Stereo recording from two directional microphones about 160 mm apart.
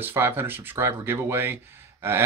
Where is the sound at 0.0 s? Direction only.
15° right (ahead or behind).